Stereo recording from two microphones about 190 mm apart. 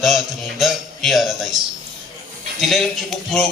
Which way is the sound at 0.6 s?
Centre (ahead or behind).